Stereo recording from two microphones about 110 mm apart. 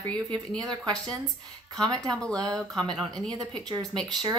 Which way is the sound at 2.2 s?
10° left (ahead or behind).